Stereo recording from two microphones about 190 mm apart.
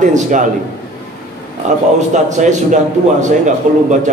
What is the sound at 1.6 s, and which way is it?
Speech, 40° right (ahead or behind).